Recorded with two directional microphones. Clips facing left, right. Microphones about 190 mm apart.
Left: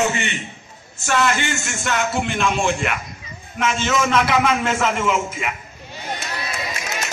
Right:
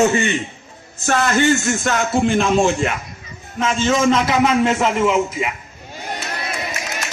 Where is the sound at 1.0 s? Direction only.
40° right (ahead or behind); by 5.5 s 20° right (ahead or behind).